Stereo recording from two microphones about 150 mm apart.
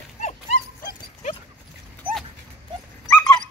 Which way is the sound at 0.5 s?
70° left (ahead or behind).